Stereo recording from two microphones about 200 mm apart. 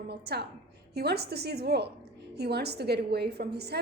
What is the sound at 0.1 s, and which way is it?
A woman's voice, 55° right (ahead or behind).